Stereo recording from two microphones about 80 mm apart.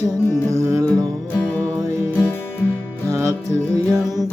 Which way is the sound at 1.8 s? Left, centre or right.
Right.